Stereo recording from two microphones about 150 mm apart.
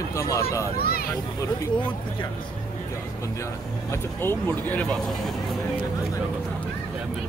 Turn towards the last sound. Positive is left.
turn(degrees=0)  # may be behind; listen again after turning